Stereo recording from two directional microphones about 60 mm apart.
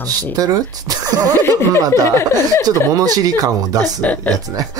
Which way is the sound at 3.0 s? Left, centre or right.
Right.